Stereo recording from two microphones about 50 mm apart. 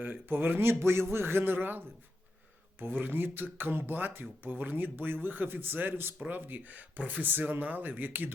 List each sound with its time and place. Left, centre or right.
0.0 s speech: right